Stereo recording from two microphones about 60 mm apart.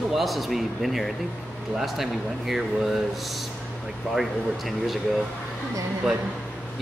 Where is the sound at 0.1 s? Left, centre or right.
Centre.